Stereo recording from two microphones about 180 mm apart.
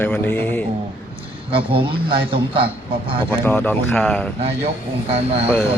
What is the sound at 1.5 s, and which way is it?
A man's voice, 30° right (ahead or behind).